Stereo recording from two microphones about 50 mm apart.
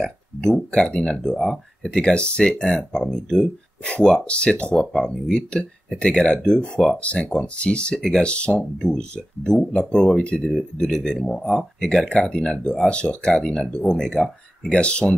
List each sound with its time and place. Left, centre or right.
0.0 s speech: centre
4.3 s speech: left
4.7 s speech: centre
7.0 s speech: left